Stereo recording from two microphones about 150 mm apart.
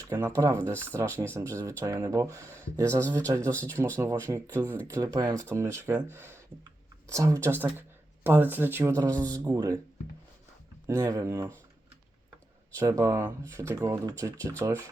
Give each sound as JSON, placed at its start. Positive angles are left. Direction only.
{"t": 0.1, "sound": "speech", "side_deg": -20}
{"t": 10.8, "sound": "speech", "side_deg": -20}
{"t": 12.7, "sound": "speech", "side_deg": -20}